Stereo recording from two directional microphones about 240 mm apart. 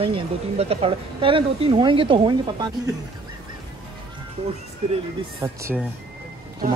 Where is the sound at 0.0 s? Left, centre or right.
Right.